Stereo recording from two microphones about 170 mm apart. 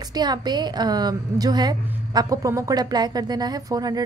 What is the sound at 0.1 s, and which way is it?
A woman's voice, 25° right (ahead or behind).